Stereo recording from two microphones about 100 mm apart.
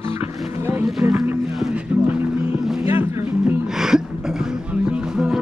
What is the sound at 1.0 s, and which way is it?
Speech, 15° right (ahead or behind).